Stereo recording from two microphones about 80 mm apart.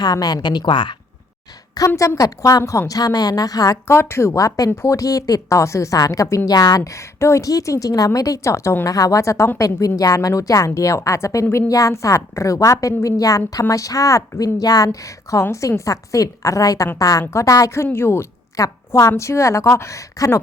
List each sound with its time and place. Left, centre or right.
0.0 s speech: left
2.0 s a woman's voice: left
3.8 s a woman's voice: left
4.4 s a woman's voice: left
4.7 s a woman's voice: left
4.9 s a woman's voice: left
6.5 s a woman's voice: left
17.8 s a woman's voice: left
18.5 s a woman's voice: left